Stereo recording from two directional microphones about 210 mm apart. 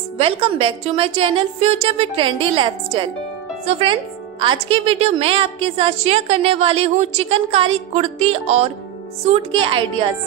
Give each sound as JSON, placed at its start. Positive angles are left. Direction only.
{"t": 0.2, "sound": "speech", "side_deg": -25}